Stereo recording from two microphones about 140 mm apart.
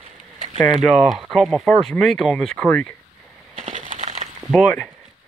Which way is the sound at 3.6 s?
60° right (ahead or behind).